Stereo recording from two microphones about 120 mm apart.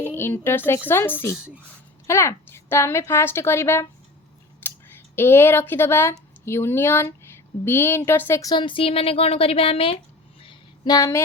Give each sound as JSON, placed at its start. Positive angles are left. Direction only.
{"t": 0.0, "sound": "a woman's voice", "side_deg": 20}
{"t": 8.4, "sound": "a woman's voice", "side_deg": 35}
{"t": 10.4, "sound": "a sound", "side_deg": 45}
{"t": 10.9, "sound": "a woman's voice", "side_deg": 25}